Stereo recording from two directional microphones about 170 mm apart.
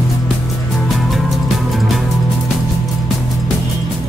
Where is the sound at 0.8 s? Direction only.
Centre (ahead or behind).